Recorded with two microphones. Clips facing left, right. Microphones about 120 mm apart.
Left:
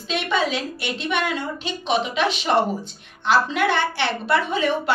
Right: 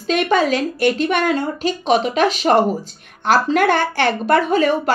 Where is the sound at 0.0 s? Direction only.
45° right (ahead or behind).